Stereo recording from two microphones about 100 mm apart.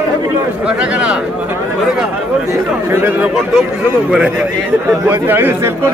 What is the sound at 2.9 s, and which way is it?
Speech, 20° right (ahead or behind).